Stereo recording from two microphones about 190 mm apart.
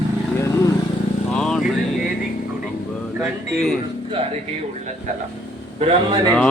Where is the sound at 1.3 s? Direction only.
5° left (ahead or behind).